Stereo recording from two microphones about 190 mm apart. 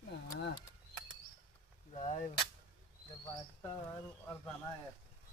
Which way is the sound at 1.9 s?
40° left (ahead or behind).